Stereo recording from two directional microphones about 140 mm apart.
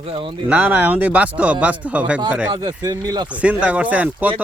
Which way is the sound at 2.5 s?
30° right (ahead or behind).